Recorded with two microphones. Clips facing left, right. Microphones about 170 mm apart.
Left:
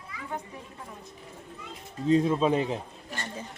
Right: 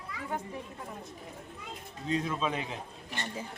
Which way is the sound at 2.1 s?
35° left (ahead or behind).